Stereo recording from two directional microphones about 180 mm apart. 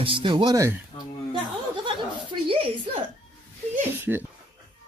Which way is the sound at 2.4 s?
30° right (ahead or behind).